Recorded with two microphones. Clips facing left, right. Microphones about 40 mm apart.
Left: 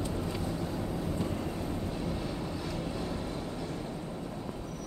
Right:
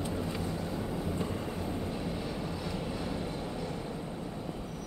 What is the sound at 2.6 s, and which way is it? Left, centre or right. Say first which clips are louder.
Vehicle: even; centre.